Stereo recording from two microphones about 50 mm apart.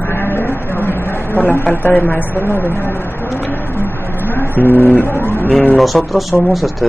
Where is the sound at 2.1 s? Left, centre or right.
Left.